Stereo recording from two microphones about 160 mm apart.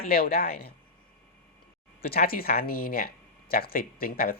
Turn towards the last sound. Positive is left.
turn(degrees=70)  # may be behind; listen again after turning